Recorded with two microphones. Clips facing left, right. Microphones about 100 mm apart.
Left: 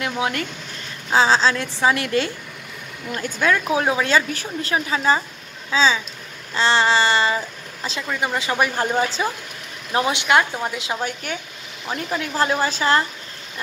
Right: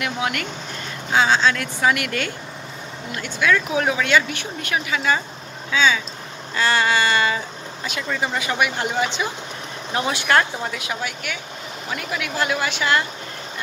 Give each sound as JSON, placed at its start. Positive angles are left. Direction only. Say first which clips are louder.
{"t": 0.0, "sound": "a woman's voice", "louder": "left 1 dB", "side_deg": 30}
{"t": 3.1, "sound": "a woman's voice", "louder": "even", "side_deg": 40}
{"t": 8.4, "sound": "speech", "louder": "left 3 dB", "side_deg": 30}
{"t": 9.9, "sound": "a woman's voice", "louder": "left 1 dB", "side_deg": 20}
{"t": 11.0, "sound": "speech", "louder": "left 2 dB", "side_deg": 40}